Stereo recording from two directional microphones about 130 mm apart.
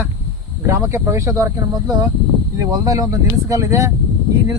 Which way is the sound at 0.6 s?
20° right (ahead or behind).